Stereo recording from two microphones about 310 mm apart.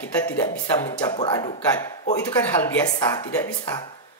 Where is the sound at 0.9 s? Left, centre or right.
Centre.